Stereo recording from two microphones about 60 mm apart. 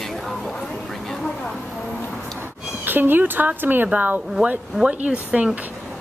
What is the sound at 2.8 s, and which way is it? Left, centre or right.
Speech, right.